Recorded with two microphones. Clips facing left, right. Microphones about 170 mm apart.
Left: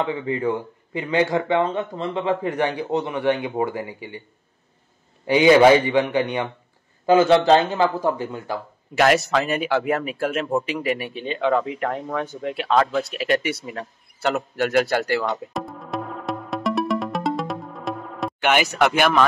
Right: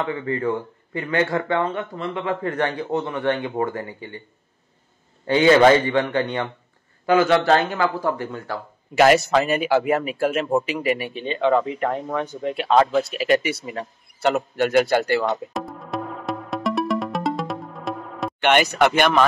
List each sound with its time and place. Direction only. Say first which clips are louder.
0.0 s speech: left 1 dB; 15° left (ahead or behind)
5.2 s speech: left 1 dB; 15° left (ahead or behind)
7.1 s speech: left 2 dB; 25° left (ahead or behind)
8.9 s speech: right 3 dB; centre (ahead or behind)
15.5 s music: even; centre (ahead or behind)